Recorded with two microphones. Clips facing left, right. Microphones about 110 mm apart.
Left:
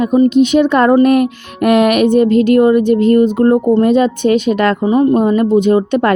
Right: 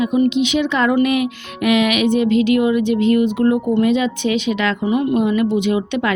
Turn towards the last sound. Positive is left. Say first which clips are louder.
# left 7 dB
turn(degrees=45)  # may be behind; listen again after turning